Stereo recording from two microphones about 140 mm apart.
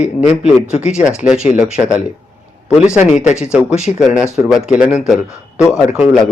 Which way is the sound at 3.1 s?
60° left (ahead or behind).